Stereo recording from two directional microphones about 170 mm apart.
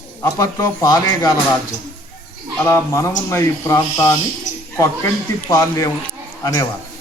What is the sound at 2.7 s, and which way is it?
Speech, 15° left (ahead or behind).